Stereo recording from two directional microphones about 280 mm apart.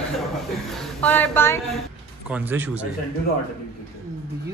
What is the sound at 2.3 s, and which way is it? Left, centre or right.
Speech, centre.